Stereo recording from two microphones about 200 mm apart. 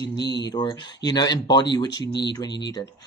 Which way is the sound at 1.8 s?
60° left (ahead or behind).